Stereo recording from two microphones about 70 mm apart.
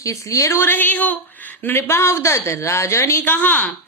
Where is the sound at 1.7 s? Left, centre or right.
Left.